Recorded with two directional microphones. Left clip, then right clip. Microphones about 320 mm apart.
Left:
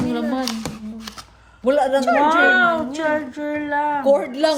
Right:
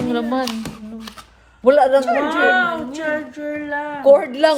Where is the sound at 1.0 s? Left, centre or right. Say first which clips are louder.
Left 1 dB; centre.